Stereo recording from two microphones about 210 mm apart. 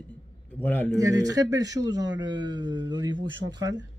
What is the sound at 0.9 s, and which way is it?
Speech, 15° right (ahead or behind).